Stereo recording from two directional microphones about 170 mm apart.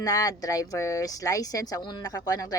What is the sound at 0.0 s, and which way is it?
Speech, 20° left (ahead or behind).